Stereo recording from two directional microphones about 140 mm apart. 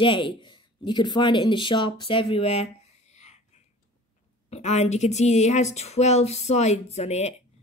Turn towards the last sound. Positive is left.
turn(degrees=50)  # may be behind; listen again after turning